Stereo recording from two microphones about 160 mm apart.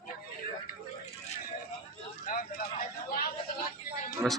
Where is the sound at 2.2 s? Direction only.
60° left (ahead or behind).